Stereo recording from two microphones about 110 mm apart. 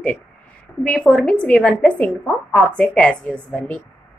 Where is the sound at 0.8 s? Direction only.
10° left (ahead or behind).